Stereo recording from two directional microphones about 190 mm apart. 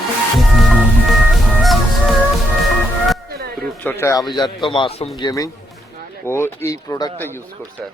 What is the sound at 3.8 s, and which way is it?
A man's voice, 15° left (ahead or behind).